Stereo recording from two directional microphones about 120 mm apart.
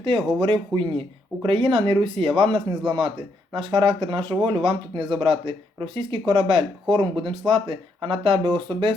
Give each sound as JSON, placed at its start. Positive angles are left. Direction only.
{"t": 0.3, "sound": "speech", "side_deg": -45}